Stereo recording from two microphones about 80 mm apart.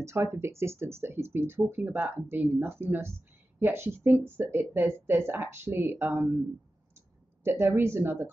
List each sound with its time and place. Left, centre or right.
0.0 s speech: right
7.4 s speech: right